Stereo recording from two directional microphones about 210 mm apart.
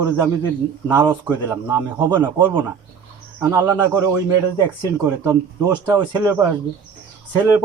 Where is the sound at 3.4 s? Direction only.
15° right (ahead or behind).